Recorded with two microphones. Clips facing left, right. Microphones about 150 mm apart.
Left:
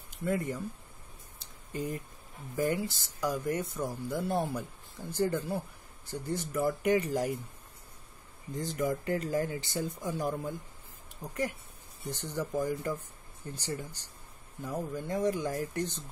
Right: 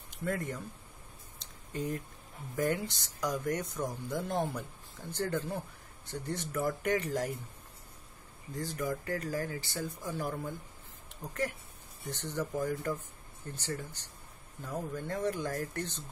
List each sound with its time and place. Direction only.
0.2 s speech: 5° left (ahead or behind)
1.4 s a sound: 10° left (ahead or behind)
2.5 s speech: 5° left (ahead or behind)
8.5 s speech: 20° left (ahead or behind)